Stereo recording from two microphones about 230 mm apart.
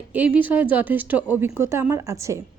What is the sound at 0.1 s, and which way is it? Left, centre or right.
A woman's voice, centre.